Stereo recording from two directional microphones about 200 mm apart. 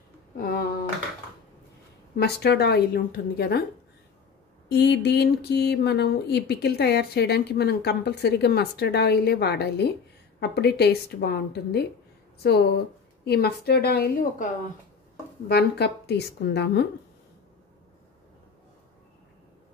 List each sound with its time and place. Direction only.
0.4 s a woman's voice: 50° left (ahead or behind)
2.1 s a woman's voice: 55° left (ahead or behind)
4.6 s a woman's voice: 60° left (ahead or behind)